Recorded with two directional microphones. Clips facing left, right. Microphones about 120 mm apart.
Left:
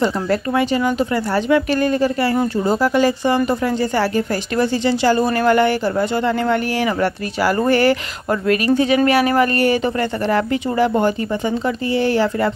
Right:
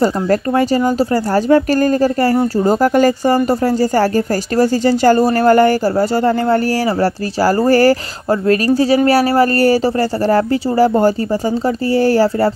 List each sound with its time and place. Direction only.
0.0 s speech: 40° right (ahead or behind)